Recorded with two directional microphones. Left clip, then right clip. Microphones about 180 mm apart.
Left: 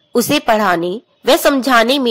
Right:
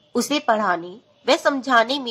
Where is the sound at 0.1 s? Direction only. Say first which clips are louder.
Left 7 dB; 40° left (ahead or behind).